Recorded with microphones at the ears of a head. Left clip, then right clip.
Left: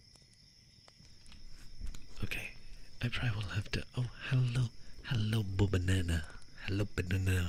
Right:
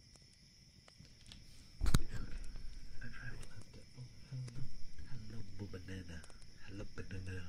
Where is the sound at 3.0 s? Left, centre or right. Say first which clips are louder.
Left 13 dB; left.